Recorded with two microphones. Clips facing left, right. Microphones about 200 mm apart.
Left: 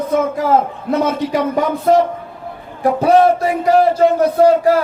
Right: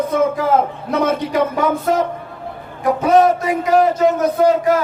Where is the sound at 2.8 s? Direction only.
35° left (ahead or behind).